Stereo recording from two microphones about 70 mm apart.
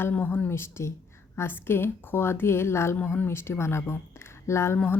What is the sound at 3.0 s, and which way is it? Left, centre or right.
Speech, left.